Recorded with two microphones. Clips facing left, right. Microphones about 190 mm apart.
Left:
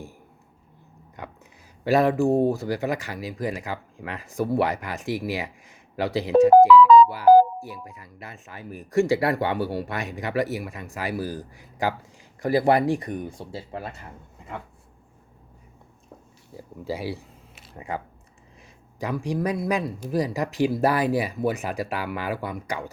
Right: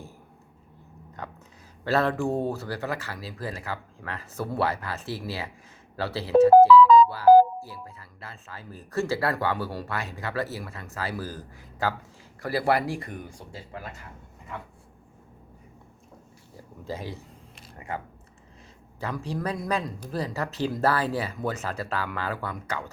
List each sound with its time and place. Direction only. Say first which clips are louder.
1.8 s speech: left 5 dB; 15° left (ahead or behind); by 13.9 s 30° left (ahead or behind)
16.8 s a sound: left 5 dB; 10° left (ahead or behind)
17.7 s speech: left 3 dB; 15° left (ahead or behind)